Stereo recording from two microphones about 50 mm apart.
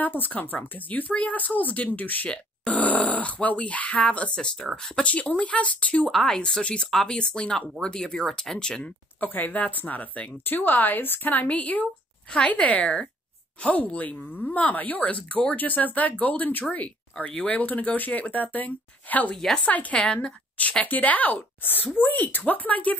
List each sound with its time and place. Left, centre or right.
0.0 s speech: left
2.2 s speech: centre
2.7 s speech: left
6.1 s speech: centre
6.9 s speech: centre
9.2 s speech: left
12.3 s speech: centre
19.3 s speech: centre
19.6 s speech: left
20.8 s speech: left